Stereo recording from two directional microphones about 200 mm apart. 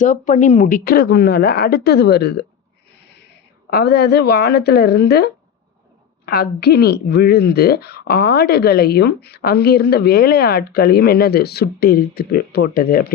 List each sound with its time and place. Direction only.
0.0 s speech: 40° left (ahead or behind); by 2.4 s 55° left (ahead or behind)
3.7 s speech: 50° left (ahead or behind)